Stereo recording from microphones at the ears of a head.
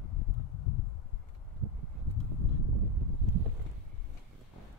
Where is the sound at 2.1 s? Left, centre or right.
Left.